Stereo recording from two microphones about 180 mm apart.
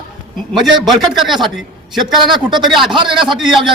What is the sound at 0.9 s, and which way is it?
Speech, centre (ahead or behind).